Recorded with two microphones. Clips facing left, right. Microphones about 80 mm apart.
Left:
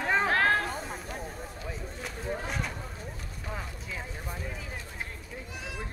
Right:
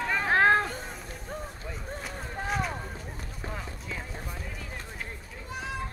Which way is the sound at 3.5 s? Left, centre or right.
Centre.